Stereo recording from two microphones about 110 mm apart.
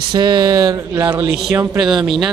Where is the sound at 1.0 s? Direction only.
20° right (ahead or behind).